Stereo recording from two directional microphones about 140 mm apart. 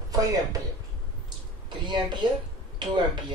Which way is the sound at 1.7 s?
35° right (ahead or behind).